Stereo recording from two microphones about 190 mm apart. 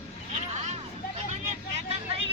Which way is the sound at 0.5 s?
35° right (ahead or behind).